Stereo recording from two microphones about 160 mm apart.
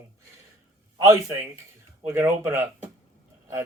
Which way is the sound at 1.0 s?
20° right (ahead or behind).